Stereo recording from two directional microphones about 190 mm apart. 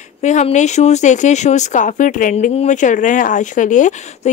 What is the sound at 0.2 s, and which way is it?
Speech, 40° left (ahead or behind).